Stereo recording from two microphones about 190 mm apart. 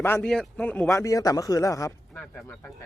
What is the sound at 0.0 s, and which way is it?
Speech, 5° left (ahead or behind).